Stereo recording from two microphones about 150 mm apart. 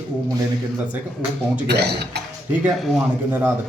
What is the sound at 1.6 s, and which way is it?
Speech, 90° right.